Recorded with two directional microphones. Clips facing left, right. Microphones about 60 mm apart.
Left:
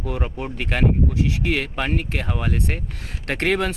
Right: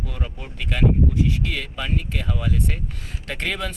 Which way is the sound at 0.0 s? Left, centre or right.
Left.